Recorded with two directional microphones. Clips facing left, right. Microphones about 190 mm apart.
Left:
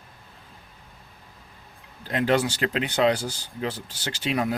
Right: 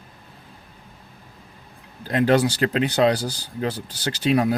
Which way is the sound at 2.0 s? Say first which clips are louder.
Right 4 dB; 40° right (ahead or behind).